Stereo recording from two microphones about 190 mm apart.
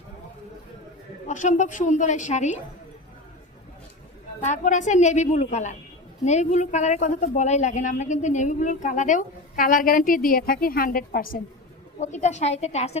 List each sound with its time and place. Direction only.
1.3 s speech: 40° left (ahead or behind)
4.4 s speech: 40° left (ahead or behind)
11.9 s speech: 40° left (ahead or behind)